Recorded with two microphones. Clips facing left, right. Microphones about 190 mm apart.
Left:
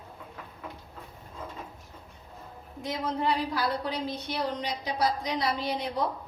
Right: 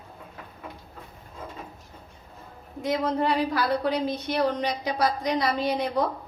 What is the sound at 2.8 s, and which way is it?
A woman's voice, 65° right (ahead or behind).